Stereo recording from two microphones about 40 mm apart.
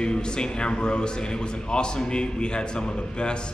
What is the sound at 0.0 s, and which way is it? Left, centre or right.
A man's voice, left.